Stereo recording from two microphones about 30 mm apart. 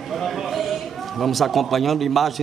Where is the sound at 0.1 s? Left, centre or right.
Centre.